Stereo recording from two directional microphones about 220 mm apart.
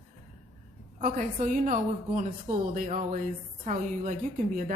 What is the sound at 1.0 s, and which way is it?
A woman's voice, 35° right (ahead or behind).